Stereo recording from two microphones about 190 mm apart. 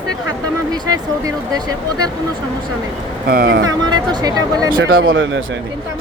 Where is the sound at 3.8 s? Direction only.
20° right (ahead or behind).